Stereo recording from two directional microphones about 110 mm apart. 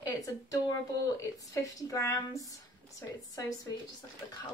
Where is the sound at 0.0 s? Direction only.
30° left (ahead or behind).